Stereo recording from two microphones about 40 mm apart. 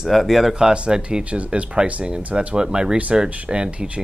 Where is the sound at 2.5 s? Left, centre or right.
Right.